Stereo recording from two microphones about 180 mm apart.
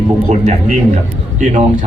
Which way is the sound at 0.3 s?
40° right (ahead or behind).